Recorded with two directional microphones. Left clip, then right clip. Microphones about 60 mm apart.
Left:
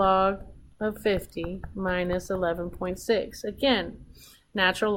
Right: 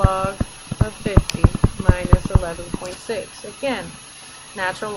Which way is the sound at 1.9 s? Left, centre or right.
Centre.